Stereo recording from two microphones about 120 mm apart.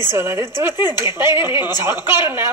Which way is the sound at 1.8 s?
20° right (ahead or behind).